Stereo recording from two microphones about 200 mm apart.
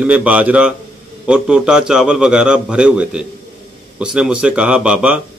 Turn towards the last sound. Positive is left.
turn(degrees=-5)  # may be behind; listen again after turning